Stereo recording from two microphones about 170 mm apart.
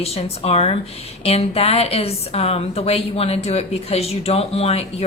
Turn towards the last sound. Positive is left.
turn(degrees=40)  # may be behind; listen again after turning